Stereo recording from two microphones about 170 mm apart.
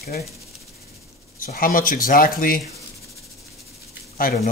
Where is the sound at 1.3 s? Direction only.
55° left (ahead or behind).